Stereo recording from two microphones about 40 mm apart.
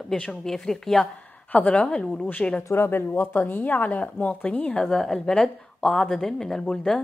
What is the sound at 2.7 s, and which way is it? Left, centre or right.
Speech, left.